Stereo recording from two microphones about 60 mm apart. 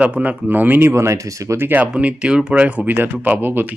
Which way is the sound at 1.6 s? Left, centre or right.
Right.